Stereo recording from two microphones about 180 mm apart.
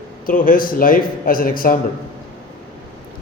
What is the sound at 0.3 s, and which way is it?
A man's voice, 50° left (ahead or behind).